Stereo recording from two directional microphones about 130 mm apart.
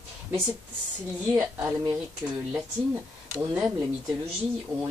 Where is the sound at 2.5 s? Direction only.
15° right (ahead or behind).